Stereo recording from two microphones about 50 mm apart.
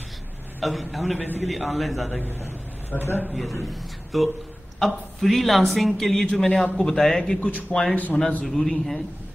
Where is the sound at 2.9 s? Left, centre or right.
Left.